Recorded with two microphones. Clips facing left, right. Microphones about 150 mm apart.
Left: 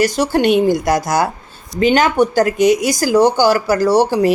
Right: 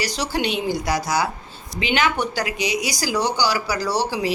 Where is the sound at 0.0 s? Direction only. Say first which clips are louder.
Left 10 dB; 50° left (ahead or behind).